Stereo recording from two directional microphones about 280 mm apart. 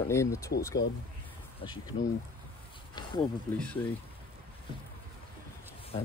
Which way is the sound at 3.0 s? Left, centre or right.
Centre.